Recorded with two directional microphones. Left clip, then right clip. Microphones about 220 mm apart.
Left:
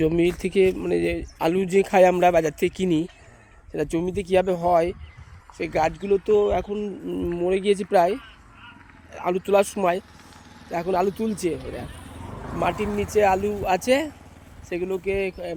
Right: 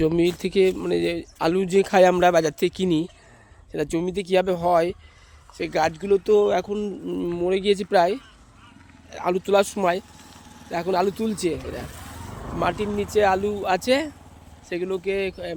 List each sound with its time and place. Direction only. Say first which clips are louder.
0.0 s speech: even; centre (ahead or behind)
6.1 s speech: right 2 dB; 10° right (ahead or behind)
11.8 s vehicle: right 1 dB; 35° right (ahead or behind)
12.7 s speech: even; 35° left (ahead or behind)
13.1 s speech: even; centre (ahead or behind)